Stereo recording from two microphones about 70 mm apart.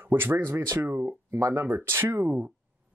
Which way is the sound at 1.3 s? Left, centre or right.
Right.